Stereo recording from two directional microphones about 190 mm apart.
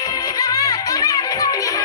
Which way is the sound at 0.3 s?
20° left (ahead or behind).